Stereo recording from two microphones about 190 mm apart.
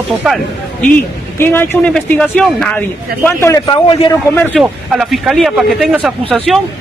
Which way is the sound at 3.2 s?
15° left (ahead or behind).